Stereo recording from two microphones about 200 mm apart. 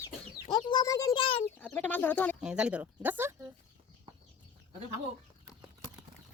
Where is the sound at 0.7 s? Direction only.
20° left (ahead or behind).